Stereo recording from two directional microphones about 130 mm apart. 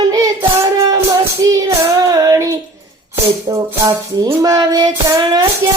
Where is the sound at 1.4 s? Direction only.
30° right (ahead or behind).